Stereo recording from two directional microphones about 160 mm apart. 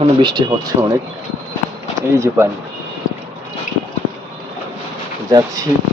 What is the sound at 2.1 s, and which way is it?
Speech, 20° right (ahead or behind).